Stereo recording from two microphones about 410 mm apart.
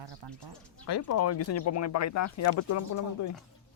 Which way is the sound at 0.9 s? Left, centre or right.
Left.